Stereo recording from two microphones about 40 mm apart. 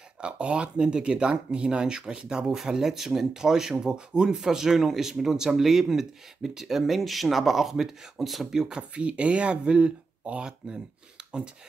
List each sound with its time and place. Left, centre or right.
0.2 s speech: right
2.5 s speech: centre
4.5 s speech: centre
8.5 s speech: centre